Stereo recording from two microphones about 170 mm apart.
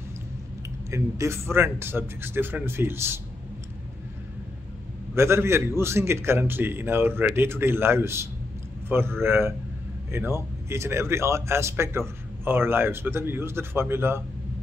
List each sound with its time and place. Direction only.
0.8 s a man's voice: 15° right (ahead or behind)
5.1 s a man's voice: 15° right (ahead or behind)